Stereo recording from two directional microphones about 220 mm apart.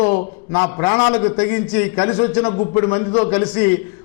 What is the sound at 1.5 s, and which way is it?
Speech, 10° left (ahead or behind).